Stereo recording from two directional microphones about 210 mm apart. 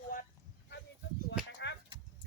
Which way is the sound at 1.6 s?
55° left (ahead or behind).